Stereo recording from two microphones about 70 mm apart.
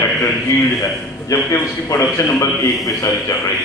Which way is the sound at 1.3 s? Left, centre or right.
Left.